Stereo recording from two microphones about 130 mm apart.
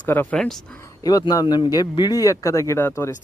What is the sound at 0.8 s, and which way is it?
A man's voice, 30° left (ahead or behind).